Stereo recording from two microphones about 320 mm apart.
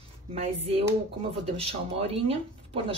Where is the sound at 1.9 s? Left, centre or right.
Centre.